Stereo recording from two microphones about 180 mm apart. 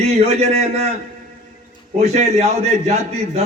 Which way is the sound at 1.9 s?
40° right (ahead or behind).